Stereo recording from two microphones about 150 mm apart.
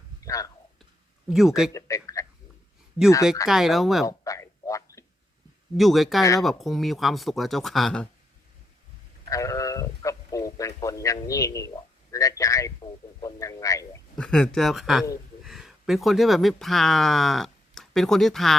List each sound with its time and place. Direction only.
0.2 s speech: 20° left (ahead or behind)
1.3 s speech: 5° right (ahead or behind)
1.7 s a sound: 20° left (ahead or behind)
3.4 s speech: centre (ahead or behind)
4.0 s a sound: 20° left (ahead or behind)
5.7 s speech: centre (ahead or behind)
9.3 s sheep: 20° left (ahead or behind)
13.2 s a man's voice: 20° left (ahead or behind)
14.2 s speech: 5° left (ahead or behind)